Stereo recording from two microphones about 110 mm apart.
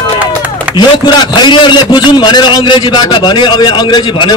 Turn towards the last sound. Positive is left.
turn(degrees=40)  # may be behind; listen again after turning